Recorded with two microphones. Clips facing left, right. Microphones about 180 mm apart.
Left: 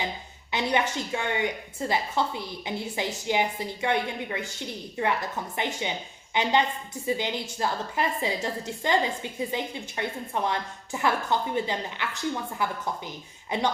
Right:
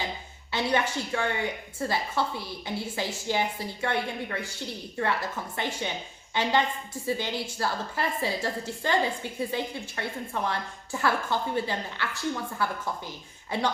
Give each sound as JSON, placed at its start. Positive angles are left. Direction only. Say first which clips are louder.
{"t": 0.5, "sound": "a woman's voice", "louder": "left 1 dB", "side_deg": 15}